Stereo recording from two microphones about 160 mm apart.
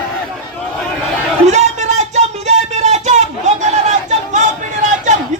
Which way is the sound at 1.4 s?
45° right (ahead or behind).